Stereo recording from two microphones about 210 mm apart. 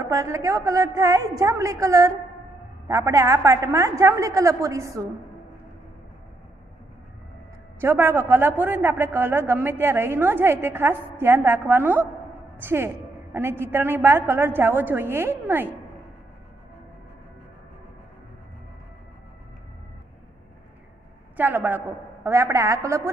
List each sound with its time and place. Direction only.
0.0 s speech: 15° right (ahead or behind)
7.8 s speech: 10° right (ahead or behind)
21.4 s speech: 10° right (ahead or behind)